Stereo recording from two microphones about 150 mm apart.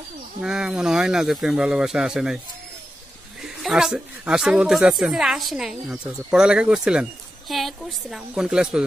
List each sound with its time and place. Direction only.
0.4 s speech: 5° right (ahead or behind)
3.6 s speech: 5° right (ahead or behind)